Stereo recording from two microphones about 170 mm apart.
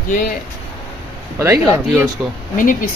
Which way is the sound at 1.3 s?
15° right (ahead or behind).